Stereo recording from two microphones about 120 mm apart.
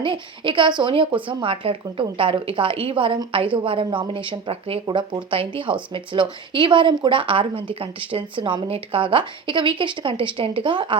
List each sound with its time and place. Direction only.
0.0 s speech: 45° right (ahead or behind)